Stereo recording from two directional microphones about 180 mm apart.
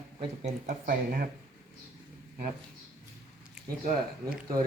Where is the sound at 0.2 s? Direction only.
40° right (ahead or behind).